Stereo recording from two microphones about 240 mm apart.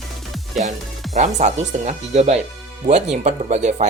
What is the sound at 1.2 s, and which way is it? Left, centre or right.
Speech, right.